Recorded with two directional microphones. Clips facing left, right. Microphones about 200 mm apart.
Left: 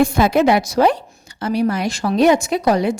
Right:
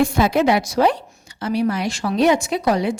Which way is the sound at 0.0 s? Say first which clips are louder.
Left 2 dB; 50° left (ahead or behind).